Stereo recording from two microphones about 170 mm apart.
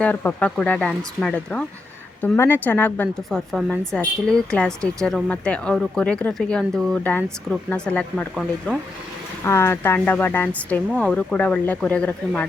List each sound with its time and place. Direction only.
0.0 s a woman's voice: 10° left (ahead or behind)
8.4 s speech: 5° right (ahead or behind)
9.4 s a woman's voice: 15° left (ahead or behind)